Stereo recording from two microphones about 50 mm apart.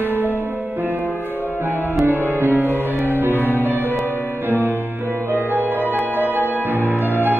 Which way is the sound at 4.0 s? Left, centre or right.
Left.